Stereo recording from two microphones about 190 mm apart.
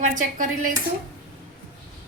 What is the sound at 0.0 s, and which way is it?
Speech, 45° right (ahead or behind).